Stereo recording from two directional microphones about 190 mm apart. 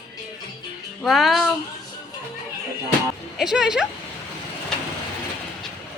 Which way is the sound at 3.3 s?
Centre (ahead or behind).